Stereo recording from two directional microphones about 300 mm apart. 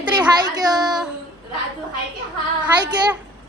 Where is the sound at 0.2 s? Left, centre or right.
Centre.